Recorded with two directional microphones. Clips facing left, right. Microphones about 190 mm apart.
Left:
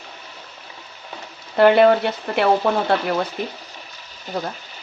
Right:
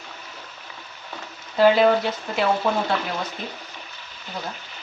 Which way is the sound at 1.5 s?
60° left (ahead or behind).